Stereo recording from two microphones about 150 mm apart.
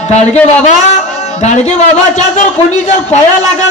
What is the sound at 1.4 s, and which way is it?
Speech, 50° left (ahead or behind).